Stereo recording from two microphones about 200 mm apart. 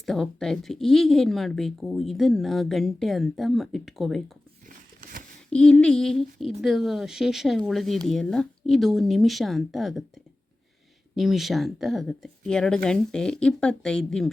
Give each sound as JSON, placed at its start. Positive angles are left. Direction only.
{"t": 0.0, "sound": "speech", "side_deg": 0}
{"t": 4.7, "sound": "a sound", "side_deg": -40}
{"t": 5.5, "sound": "speech", "side_deg": 5}
{"t": 11.1, "sound": "speech", "side_deg": 0}